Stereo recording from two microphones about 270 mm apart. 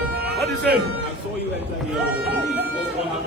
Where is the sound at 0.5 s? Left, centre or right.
Right.